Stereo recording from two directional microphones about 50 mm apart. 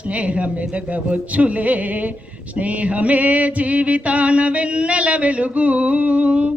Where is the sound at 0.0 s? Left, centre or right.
Right.